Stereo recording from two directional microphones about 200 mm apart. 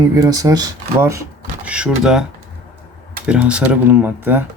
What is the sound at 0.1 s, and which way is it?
Speech, 15° right (ahead or behind).